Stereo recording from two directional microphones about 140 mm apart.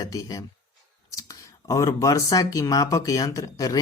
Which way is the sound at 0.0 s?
25° left (ahead or behind).